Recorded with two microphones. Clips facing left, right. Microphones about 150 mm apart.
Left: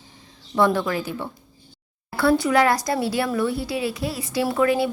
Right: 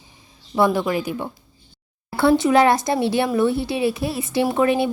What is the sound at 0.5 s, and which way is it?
Speech, 10° right (ahead or behind).